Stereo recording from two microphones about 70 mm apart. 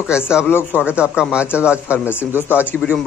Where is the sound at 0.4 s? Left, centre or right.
Left.